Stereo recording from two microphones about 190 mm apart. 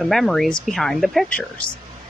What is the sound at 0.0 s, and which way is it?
Speech, centre (ahead or behind).